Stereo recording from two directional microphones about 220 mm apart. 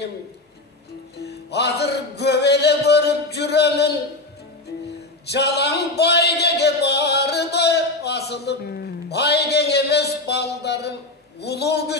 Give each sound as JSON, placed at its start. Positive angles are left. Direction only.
{"t": 1.1, "sound": "music", "side_deg": 50}
{"t": 5.2, "sound": "a sound", "side_deg": 50}
{"t": 11.4, "sound": "a man's voice", "side_deg": 50}